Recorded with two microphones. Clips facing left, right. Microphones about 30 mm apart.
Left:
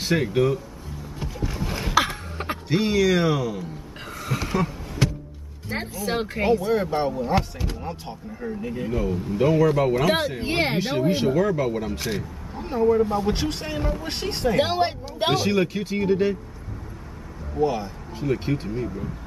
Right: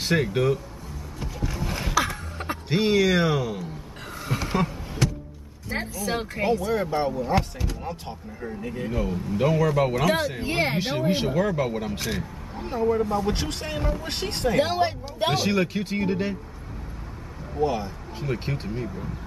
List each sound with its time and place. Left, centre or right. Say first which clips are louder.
0.0 s speech: left 1 dB; centre
1.2 s a sound: left 1 dB; centre
2.3 s a sound: left 2 dB; left
2.7 s speech: even; centre
4.2 s a sound: left 1 dB; centre
5.7 s speech: left 1 dB; centre
10.0 s speech: left 1 dB; centre
10.4 s speech: left 1 dB; left
10.8 s speech: left 2 dB; centre
14.6 s speech: even; left
15.3 s speech: left 2 dB; centre
17.6 s speech: left 2 dB; centre